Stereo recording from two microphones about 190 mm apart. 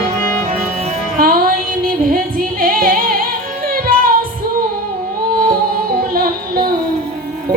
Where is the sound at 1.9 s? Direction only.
50° right (ahead or behind).